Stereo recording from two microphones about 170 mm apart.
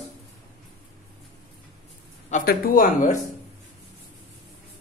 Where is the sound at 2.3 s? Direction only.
55° left (ahead or behind).